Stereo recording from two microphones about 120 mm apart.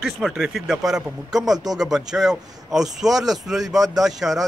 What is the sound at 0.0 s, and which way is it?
Speech, 5° right (ahead or behind).